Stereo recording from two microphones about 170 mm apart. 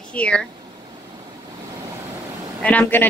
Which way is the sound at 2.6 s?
10° left (ahead or behind).